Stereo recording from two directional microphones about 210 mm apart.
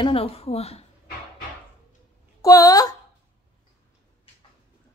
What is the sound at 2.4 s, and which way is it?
Speech, 15° left (ahead or behind).